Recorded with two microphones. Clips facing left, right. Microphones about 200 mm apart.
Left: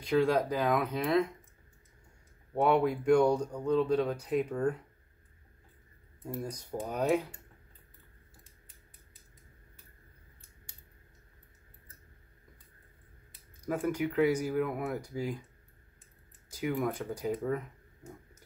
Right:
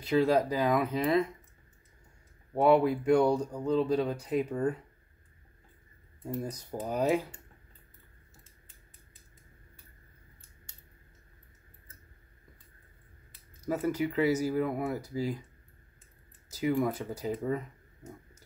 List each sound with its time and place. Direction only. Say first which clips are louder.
0.0 s speech: right 2 dB; 5° right (ahead or behind)
2.5 s speech: right 3 dB; 5° right (ahead or behind)
6.4 s speech: right 1 dB; 5° right (ahead or behind)
13.7 s speech: right 1 dB; 5° right (ahead or behind)
16.5 s speech: right 3 dB; 5° right (ahead or behind)